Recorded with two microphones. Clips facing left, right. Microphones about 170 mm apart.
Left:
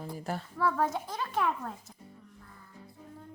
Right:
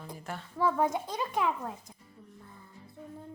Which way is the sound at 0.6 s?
15° right (ahead or behind).